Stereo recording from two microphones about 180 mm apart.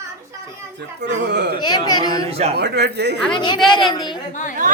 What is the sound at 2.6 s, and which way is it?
Speech, 65° right (ahead or behind).